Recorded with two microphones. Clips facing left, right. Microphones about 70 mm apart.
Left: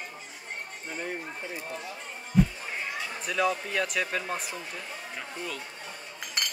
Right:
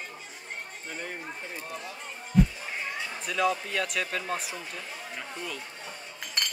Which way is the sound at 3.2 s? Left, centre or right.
Centre.